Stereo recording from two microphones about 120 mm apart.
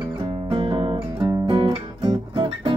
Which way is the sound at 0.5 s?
45° right (ahead or behind).